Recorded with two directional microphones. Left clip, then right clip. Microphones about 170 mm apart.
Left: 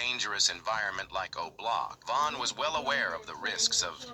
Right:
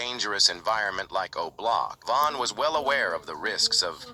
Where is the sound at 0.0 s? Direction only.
45° right (ahead or behind).